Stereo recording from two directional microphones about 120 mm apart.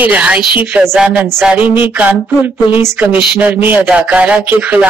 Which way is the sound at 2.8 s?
15° right (ahead or behind).